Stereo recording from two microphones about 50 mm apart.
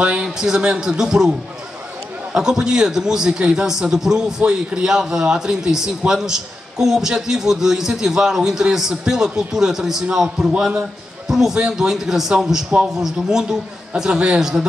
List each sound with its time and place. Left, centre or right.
0.0 s a man's voice: centre
2.3 s a man's voice: centre
11.2 s a man's voice: centre